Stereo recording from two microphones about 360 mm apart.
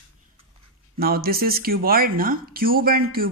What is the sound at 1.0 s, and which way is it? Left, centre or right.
Speech, right.